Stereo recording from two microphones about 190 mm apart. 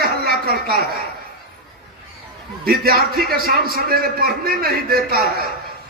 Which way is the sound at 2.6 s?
50° right (ahead or behind).